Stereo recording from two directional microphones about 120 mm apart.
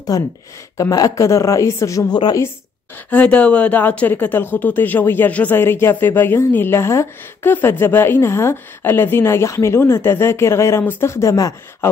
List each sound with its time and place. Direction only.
0.1 s speech: 30° left (ahead or behind)
3.1 s speech: 10° left (ahead or behind)